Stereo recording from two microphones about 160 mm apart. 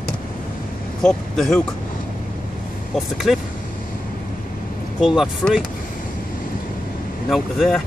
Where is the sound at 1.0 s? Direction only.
5° left (ahead or behind).